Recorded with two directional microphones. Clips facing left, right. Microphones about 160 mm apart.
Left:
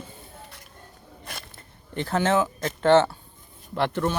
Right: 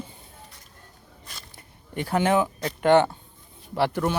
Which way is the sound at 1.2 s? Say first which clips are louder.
Left 6 dB; 60° left (ahead or behind).